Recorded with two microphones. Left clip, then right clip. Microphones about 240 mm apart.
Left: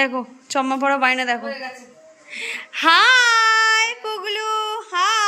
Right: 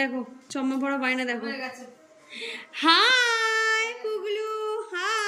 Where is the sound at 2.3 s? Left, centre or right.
Centre.